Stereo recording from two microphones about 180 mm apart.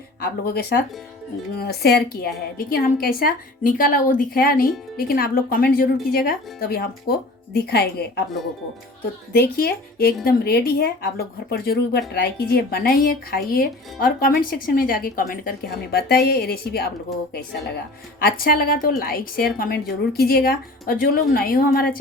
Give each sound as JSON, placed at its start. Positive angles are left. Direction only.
{"t": 0.2, "sound": "a woman's voice", "side_deg": 60}
{"t": 9.3, "sound": "speech", "side_deg": 60}
{"t": 18.2, "sound": "speech", "side_deg": 55}